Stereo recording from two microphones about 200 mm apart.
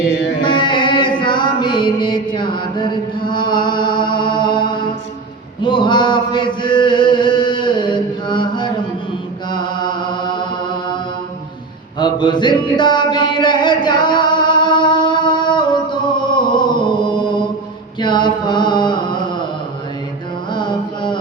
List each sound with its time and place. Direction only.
0.1 s music: 65° left (ahead or behind)
0.4 s music: 25° left (ahead or behind)
5.6 s chant: 25° left (ahead or behind)
11.9 s mantra: 25° left (ahead or behind)
20.5 s mantra: 25° left (ahead or behind)